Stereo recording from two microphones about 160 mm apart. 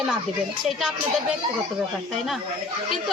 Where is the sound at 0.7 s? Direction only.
Centre (ahead or behind).